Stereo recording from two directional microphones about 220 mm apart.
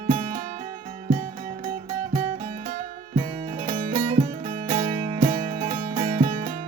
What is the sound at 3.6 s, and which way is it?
Music, 25° right (ahead or behind).